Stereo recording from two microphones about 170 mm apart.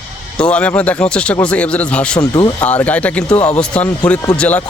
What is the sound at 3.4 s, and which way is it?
Speech, 40° left (ahead or behind).